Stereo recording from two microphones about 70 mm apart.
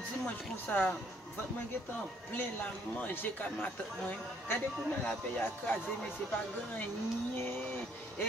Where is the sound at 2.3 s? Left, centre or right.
Left.